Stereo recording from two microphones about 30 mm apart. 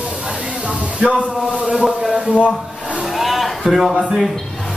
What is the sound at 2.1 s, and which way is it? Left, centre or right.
Speech, right.